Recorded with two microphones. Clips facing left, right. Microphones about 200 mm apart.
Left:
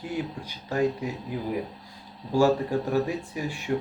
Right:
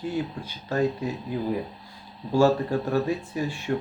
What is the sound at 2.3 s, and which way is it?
Speech, 15° left (ahead or behind).